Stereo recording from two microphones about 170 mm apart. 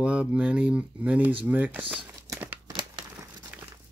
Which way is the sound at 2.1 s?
20° right (ahead or behind).